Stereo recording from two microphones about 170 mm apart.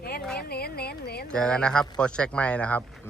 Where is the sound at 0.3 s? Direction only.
65° left (ahead or behind).